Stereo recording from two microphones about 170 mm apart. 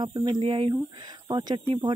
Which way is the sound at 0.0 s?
25° right (ahead or behind).